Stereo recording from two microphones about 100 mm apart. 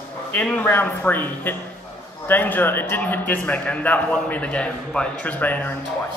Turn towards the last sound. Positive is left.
turn(degrees=15)  # may be behind; listen again after turning